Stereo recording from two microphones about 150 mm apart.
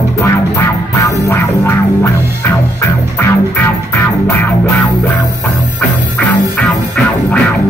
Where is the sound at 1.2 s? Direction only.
20° left (ahead or behind).